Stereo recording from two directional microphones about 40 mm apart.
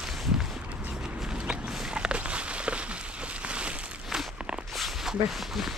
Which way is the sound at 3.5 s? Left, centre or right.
Right.